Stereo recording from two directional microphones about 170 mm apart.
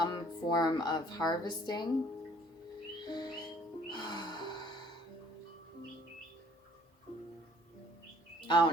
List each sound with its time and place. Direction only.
0.0 s speech: 25° left (ahead or behind)
3.1 s music: 25° left (ahead or behind)
8.4 s speech: 30° left (ahead or behind)